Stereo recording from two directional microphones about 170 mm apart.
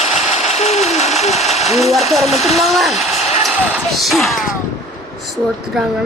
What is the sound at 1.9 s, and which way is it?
Speech, centre (ahead or behind).